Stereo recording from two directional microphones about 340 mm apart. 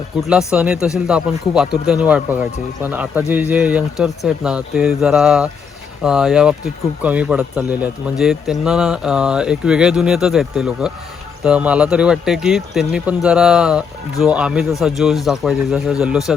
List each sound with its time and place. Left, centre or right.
0.2 s speech: centre